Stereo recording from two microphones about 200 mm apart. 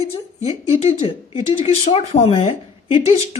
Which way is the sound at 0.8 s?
30° left (ahead or behind).